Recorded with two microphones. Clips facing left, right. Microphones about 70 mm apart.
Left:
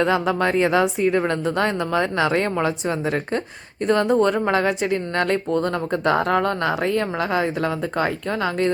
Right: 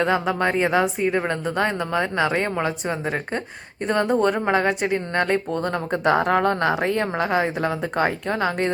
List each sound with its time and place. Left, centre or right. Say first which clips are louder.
0.0 s a woman's voice: left 1 dB; centre; by 8.7 s right